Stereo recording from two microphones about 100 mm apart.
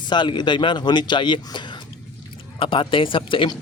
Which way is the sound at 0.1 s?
50° left (ahead or behind).